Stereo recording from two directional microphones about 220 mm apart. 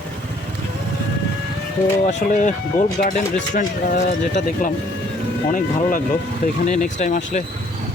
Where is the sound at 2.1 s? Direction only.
35° left (ahead or behind).